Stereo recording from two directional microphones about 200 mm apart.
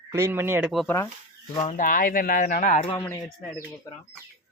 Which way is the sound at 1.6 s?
35° left (ahead or behind).